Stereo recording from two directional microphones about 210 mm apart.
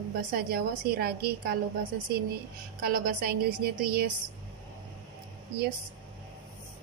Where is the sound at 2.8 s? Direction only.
45° right (ahead or behind).